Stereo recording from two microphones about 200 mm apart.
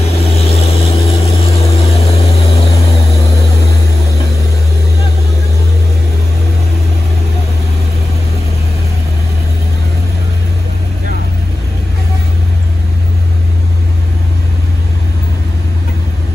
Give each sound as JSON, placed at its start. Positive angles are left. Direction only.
{"t": 0.2, "sound": "vehicle", "side_deg": 30}